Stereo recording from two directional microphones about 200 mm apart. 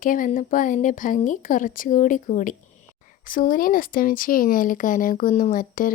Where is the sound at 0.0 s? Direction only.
40° left (ahead or behind).